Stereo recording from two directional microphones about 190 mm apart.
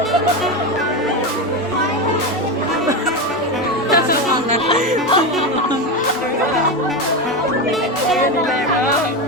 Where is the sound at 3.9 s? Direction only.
50° left (ahead or behind).